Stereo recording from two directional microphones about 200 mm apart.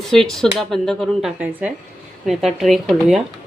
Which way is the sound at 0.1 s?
Centre (ahead or behind).